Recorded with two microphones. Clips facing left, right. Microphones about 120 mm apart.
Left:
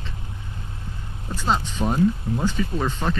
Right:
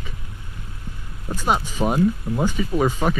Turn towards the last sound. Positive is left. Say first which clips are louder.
# right 5 dB
turn(degrees=-10)  # may be behind; listen again after turning